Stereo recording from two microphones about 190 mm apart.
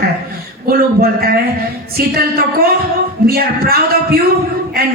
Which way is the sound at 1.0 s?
50° right (ahead or behind).